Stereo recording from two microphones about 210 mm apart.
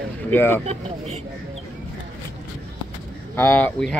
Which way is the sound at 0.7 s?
30° right (ahead or behind).